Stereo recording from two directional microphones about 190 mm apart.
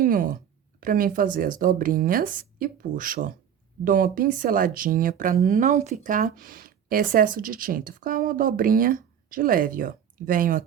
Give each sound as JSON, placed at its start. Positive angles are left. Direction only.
{"t": 0.0, "sound": "speech", "side_deg": -50}